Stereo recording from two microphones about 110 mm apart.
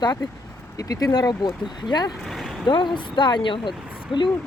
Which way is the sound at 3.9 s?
10° right (ahead or behind).